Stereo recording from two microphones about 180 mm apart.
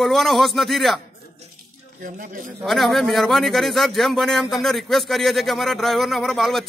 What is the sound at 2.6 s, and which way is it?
A man's voice, centre (ahead or behind).